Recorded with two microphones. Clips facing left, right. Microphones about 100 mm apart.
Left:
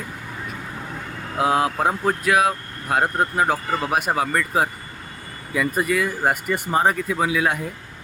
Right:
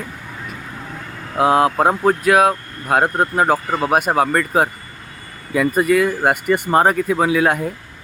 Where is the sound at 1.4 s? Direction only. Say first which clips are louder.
Right 6 dB; 60° right (ahead or behind).